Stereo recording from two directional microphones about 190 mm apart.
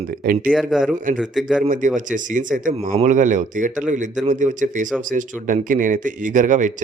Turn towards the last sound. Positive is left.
turn(degrees=-40)  # may be behind; listen again after turning